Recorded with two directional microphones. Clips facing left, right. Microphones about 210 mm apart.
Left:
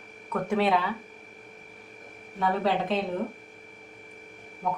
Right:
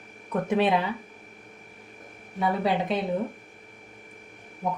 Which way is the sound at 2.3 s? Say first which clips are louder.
Right 1 dB; 10° right (ahead or behind).